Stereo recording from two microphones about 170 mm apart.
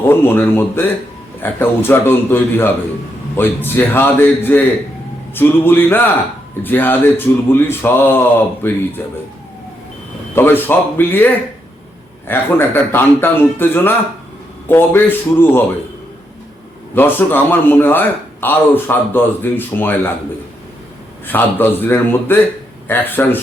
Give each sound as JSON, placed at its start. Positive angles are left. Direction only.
{"t": 0.1, "sound": "a man's voice", "side_deg": 10}
{"t": 10.3, "sound": "a man's voice", "side_deg": 10}
{"t": 12.3, "sound": "a man's voice", "side_deg": 15}
{"t": 16.9, "sound": "a man's voice", "side_deg": 10}
{"t": 21.2, "sound": "a man's voice", "side_deg": 10}